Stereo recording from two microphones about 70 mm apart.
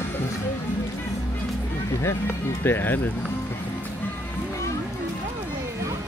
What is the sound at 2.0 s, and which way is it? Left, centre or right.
Music, left.